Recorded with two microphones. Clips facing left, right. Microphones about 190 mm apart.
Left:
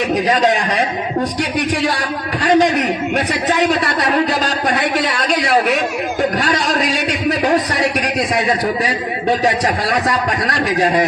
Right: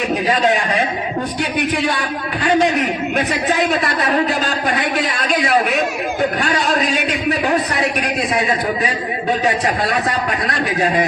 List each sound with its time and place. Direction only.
2.0 s a man's voice: 40° left (ahead or behind)